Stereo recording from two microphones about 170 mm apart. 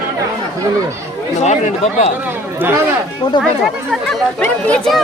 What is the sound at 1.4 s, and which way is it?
Speech, 45° left (ahead or behind).